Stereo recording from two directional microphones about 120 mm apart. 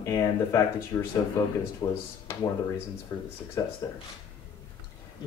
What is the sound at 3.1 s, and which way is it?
Speech, 25° left (ahead or behind).